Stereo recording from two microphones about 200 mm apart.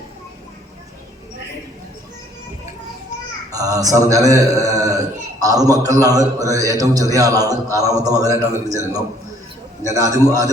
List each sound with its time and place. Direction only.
3.5 s a man's voice: 15° right (ahead or behind)
9.8 s a man's voice: 15° right (ahead or behind)